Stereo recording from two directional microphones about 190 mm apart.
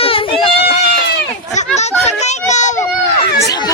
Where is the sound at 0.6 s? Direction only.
60° left (ahead or behind).